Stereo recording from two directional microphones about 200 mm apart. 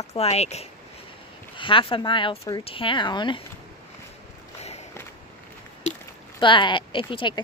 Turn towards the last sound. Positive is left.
turn(degrees=25)  # may be behind; listen again after turning